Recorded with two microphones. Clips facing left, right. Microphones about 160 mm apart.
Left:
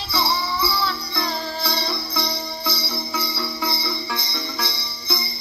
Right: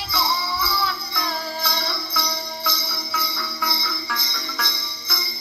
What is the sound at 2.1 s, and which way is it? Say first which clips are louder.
Jingle bell: left 2 dB; 25° left (ahead or behind).